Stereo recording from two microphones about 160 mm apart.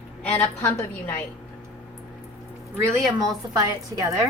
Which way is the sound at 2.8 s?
25° right (ahead or behind).